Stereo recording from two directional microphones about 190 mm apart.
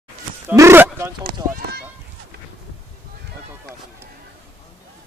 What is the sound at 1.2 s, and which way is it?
Speech, 55° right (ahead or behind).